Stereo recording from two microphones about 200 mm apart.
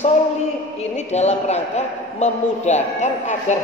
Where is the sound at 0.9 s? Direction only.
35° left (ahead or behind).